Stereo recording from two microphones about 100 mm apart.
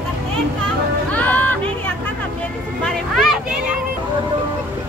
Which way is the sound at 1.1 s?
15° left (ahead or behind).